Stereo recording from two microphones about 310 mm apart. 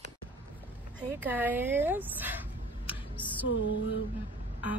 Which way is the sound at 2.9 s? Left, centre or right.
Centre.